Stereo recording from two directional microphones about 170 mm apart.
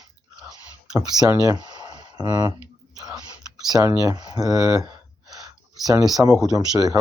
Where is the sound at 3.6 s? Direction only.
20° right (ahead or behind).